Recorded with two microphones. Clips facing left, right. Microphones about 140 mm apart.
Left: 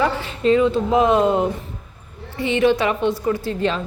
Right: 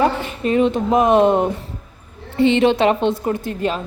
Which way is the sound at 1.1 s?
65° right (ahead or behind).